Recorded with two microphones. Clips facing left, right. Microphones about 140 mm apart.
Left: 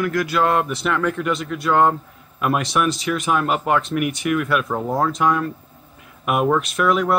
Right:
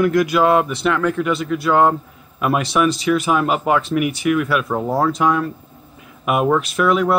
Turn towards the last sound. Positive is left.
turn(degrees=0)  # may be behind; listen again after turning